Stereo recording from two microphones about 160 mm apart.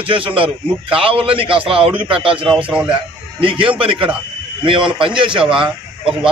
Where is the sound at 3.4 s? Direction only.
35° right (ahead or behind).